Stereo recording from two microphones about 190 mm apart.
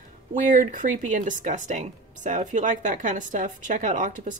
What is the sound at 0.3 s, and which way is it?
Speech, 45° right (ahead or behind).